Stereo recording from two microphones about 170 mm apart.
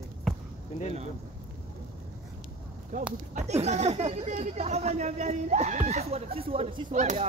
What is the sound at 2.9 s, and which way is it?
Speech, 50° right (ahead or behind).